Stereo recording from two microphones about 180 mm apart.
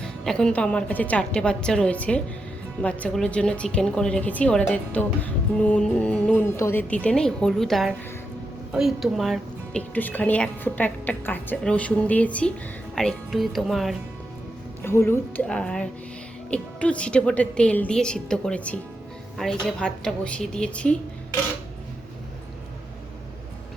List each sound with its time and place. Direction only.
0.0 s a woman's voice: 5° left (ahead or behind)
14.8 s a woman's voice: 15° left (ahead or behind)